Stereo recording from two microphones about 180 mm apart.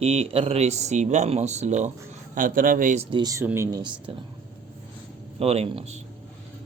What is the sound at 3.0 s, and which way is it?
Speech, 25° right (ahead or behind).